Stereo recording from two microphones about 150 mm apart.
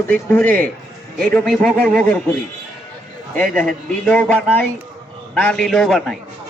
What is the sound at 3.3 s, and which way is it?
A man's voice, 10° left (ahead or behind).